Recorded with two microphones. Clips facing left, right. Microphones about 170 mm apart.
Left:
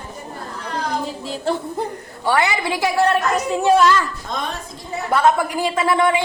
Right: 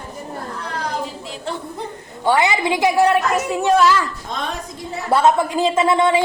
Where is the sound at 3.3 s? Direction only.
Centre (ahead or behind).